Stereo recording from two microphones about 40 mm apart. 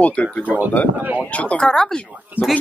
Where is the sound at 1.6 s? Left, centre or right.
Centre.